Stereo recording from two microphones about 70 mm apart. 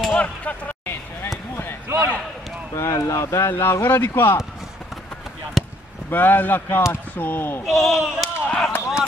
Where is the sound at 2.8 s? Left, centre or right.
Left.